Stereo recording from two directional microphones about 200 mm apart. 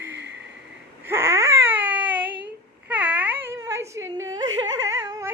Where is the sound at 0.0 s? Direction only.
60° right (ahead or behind).